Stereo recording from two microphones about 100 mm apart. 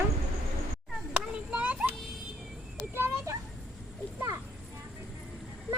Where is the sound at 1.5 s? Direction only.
15° right (ahead or behind).